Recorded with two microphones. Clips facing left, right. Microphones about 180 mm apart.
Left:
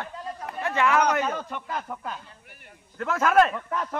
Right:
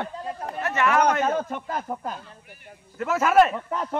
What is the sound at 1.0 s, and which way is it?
A man's voice, 50° right (ahead or behind).